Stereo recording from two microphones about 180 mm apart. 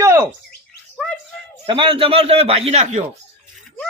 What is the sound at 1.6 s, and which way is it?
A man's voice, 30° right (ahead or behind).